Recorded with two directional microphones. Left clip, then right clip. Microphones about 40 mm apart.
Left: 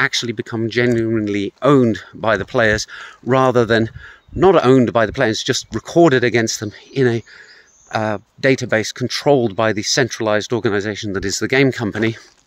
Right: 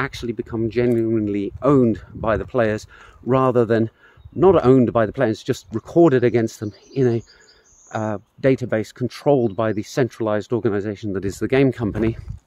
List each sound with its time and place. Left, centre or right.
0.0 s speech: centre
1.2 s speech: right
5.3 s speech: right
7.9 s speech: centre
9.1 s speech: centre